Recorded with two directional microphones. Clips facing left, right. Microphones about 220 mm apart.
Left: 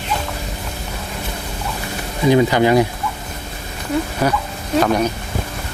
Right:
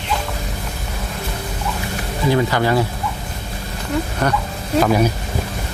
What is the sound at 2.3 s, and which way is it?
Speech, 15° left (ahead or behind).